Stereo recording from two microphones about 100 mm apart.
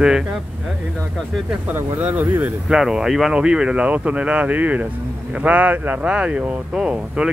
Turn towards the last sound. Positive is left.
turn(degrees=-10)  # may be behind; listen again after turning